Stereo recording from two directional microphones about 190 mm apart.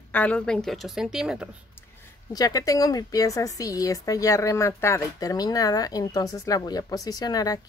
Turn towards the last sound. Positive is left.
turn(degrees=20)  # may be behind; listen again after turning